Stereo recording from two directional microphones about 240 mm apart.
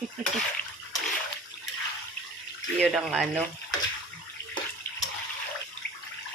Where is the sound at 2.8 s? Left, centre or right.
Centre.